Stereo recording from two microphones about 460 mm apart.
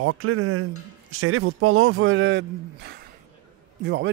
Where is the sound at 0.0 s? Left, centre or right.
Right.